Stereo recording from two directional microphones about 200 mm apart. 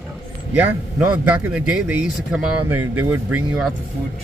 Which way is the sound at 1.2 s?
5° right (ahead or behind).